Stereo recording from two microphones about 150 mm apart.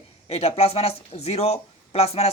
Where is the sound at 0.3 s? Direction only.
40° left (ahead or behind).